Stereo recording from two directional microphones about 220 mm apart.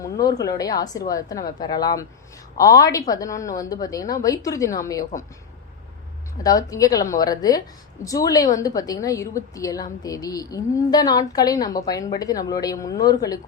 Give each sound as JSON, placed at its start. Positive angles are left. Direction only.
{"t": 0.0, "sound": "a woman's voice", "side_deg": 15}
{"t": 6.4, "sound": "a woman's voice", "side_deg": 15}